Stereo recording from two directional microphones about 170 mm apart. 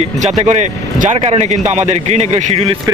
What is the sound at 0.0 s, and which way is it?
Speech, 40° right (ahead or behind).